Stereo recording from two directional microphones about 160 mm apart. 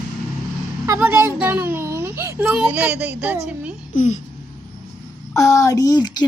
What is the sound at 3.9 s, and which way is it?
Speech, 50° left (ahead or behind).